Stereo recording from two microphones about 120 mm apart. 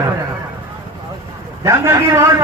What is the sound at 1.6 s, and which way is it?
Speech, 20° right (ahead or behind).